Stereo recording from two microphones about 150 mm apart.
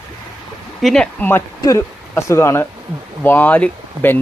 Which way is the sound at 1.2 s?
20° left (ahead or behind).